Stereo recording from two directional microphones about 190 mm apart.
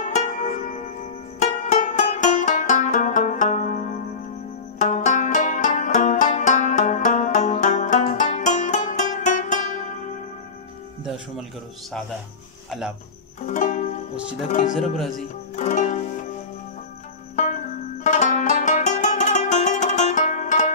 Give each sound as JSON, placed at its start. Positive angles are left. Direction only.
{"t": 0.0, "sound": "zither", "side_deg": 40}
{"t": 1.4, "sound": "music", "side_deg": 40}
{"t": 4.7, "sound": "banjo", "side_deg": 40}
{"t": 12.6, "sound": "speech", "side_deg": 0}
{"t": 13.5, "sound": "music", "side_deg": 40}
{"t": 14.5, "sound": "speech", "side_deg": 40}
{"t": 14.8, "sound": "speech", "side_deg": 0}
{"t": 15.5, "sound": "music", "side_deg": 40}
{"t": 17.4, "sound": "music", "side_deg": 40}